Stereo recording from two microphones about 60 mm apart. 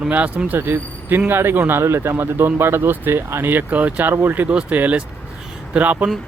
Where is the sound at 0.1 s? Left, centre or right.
Right.